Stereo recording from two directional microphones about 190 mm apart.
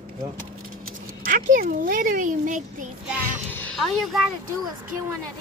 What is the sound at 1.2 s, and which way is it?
Speech, 45° right (ahead or behind).